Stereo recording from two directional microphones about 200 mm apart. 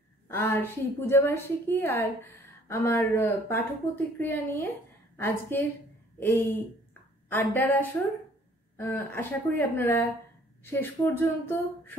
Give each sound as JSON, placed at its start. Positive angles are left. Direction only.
{"t": 0.3, "sound": "speech", "side_deg": 10}